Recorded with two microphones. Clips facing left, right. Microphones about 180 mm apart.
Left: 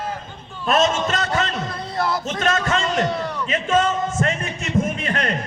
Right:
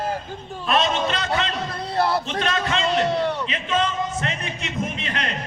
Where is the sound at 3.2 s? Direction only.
30° right (ahead or behind).